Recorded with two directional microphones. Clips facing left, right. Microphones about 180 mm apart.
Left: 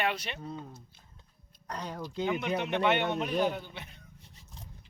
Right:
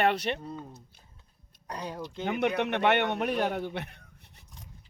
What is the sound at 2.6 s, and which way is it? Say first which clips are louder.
Speech: right 1 dB; 65° right (ahead or behind).